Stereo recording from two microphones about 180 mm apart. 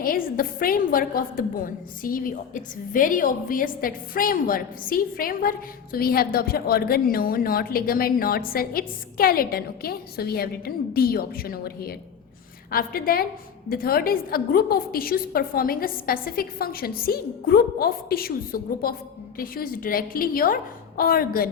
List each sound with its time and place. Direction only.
0.0 s a woman's voice: 55° left (ahead or behind)